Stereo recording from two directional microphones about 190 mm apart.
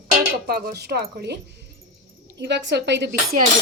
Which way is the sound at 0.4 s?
55° right (ahead or behind).